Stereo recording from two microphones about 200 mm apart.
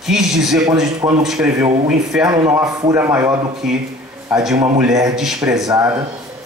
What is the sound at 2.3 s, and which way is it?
A man's voice, 15° right (ahead or behind).